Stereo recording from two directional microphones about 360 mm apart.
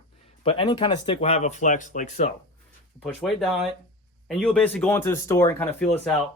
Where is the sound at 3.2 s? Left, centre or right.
Centre.